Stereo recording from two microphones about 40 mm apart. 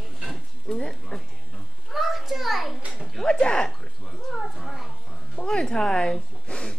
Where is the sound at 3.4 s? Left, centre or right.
Left.